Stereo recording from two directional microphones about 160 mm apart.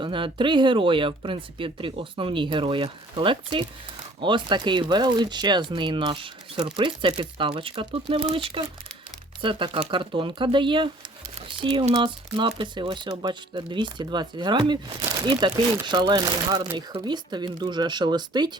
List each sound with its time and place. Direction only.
0.0 s speech: 30° right (ahead or behind)